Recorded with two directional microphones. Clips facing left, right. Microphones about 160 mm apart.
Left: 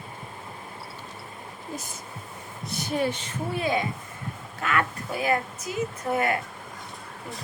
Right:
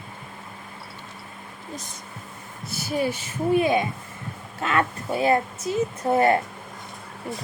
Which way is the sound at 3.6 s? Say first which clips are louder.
Right 4 dB; 20° right (ahead or behind).